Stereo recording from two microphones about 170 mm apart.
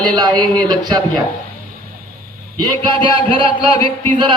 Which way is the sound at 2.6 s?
30° right (ahead or behind).